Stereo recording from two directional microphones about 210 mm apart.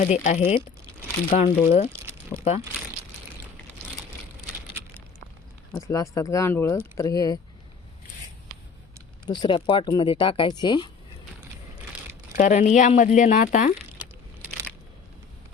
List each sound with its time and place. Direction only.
0.0 s speech: 35° left (ahead or behind)
5.7 s speech: 15° left (ahead or behind)
9.2 s speech: 20° left (ahead or behind)
12.4 s speech: 35° left (ahead or behind)